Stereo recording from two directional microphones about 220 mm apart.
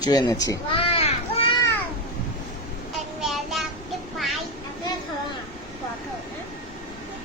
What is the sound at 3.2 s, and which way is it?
Child singing, centre (ahead or behind).